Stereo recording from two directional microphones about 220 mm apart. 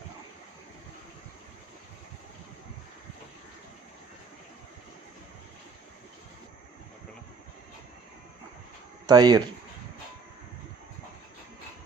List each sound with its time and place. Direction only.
9.0 s speech: 20° right (ahead or behind)